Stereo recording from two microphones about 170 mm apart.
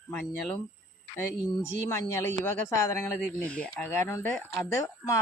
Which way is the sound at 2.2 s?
15° left (ahead or behind).